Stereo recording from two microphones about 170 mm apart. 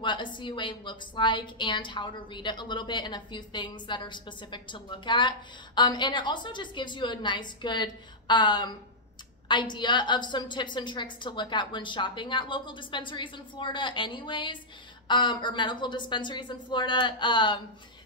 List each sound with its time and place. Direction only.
0.0 s a woman's voice: 30° left (ahead or behind)